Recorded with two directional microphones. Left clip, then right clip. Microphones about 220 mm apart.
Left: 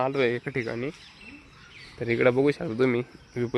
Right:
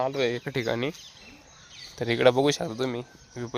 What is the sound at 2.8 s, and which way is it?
Speech, 10° left (ahead or behind).